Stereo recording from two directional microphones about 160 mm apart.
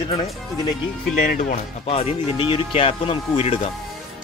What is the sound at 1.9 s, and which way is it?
Speech, 35° left (ahead or behind).